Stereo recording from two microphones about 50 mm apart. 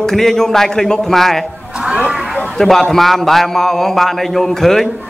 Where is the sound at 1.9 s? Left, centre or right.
Right.